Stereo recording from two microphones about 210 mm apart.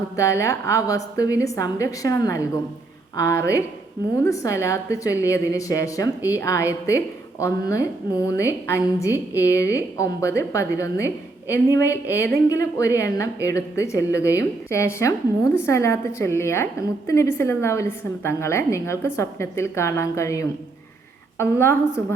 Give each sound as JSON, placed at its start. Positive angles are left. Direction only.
{"t": 0.2, "sound": "a woman's voice", "side_deg": 15}